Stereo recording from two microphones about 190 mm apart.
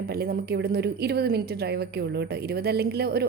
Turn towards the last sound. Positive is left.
turn(degrees=-55)  # may be behind; listen again after turning